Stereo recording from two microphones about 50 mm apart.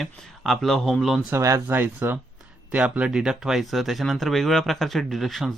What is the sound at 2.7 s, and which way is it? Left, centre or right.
Speech, right.